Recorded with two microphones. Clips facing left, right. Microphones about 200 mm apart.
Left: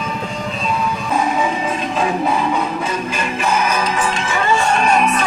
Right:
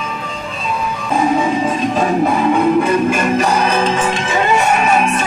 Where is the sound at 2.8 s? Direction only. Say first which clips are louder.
Right 8 dB; 55° right (ahead or behind); by 4.7 s 20° right (ahead or behind).